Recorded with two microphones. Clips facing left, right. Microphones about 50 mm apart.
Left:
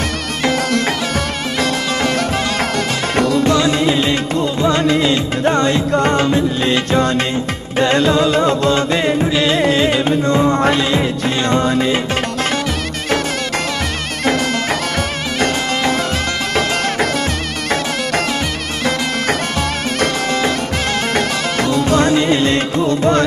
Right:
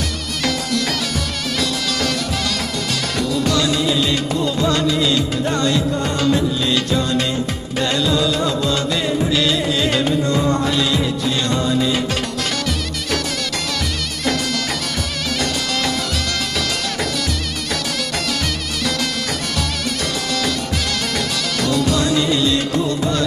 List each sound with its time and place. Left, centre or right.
1.6 s music: left
3.2 s music: left
3.4 s music: left
4.6 s music: left
6.9 s music: left
21.1 s music: left